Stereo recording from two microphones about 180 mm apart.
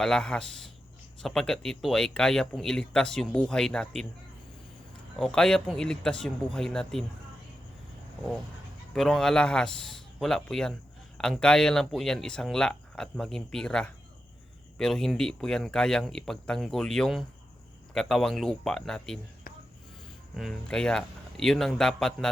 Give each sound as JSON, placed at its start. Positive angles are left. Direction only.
{"t": 0.0, "sound": "speech", "side_deg": 5}
{"t": 5.2, "sound": "speech", "side_deg": 5}
{"t": 8.9, "sound": "speech", "side_deg": 0}
{"t": 19.5, "sound": "a sound", "side_deg": 55}
{"t": 20.3, "sound": "speech", "side_deg": 0}